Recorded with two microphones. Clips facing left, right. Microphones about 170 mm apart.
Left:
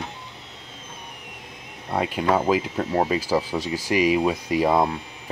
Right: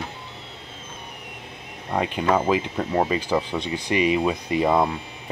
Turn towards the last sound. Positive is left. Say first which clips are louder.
# even
turn(degrees=10)  # may be behind; listen again after turning